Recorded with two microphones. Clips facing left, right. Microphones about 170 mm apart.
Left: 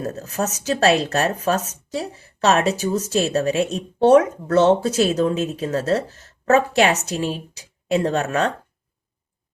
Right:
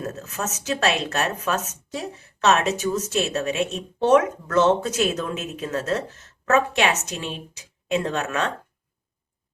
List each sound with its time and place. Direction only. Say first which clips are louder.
0.0 s speech: left 5 dB; 35° left (ahead or behind)